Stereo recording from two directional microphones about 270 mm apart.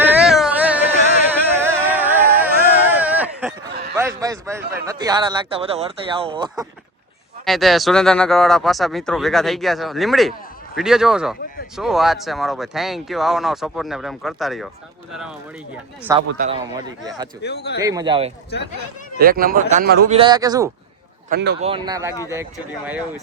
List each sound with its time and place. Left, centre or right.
0.0 s a sound: centre
4.2 s speech: centre
7.4 s speech: centre
16.1 s speech: centre
17.4 s speech: left
17.8 s speech: centre
19.2 s a man's voice: right
20.1 s speech: centre
21.2 s speech: right
21.6 s speech: centre